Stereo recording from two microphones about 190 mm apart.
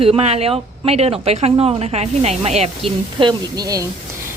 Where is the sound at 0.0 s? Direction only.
30° right (ahead or behind).